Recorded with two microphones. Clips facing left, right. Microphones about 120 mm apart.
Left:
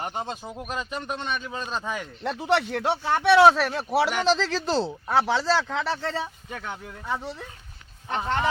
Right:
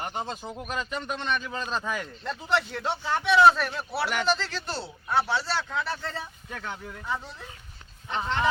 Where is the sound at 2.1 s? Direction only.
70° left (ahead or behind).